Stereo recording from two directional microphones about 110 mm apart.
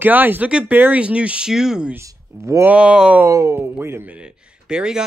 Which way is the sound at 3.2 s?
25° right (ahead or behind).